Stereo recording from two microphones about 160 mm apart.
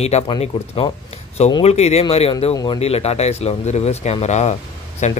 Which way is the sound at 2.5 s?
20° left (ahead or behind).